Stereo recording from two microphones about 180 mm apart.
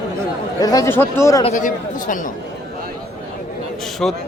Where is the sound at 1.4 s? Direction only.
40° left (ahead or behind).